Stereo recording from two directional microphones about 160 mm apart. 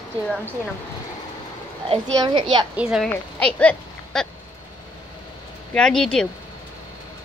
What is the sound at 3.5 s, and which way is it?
Speech, 5° left (ahead or behind).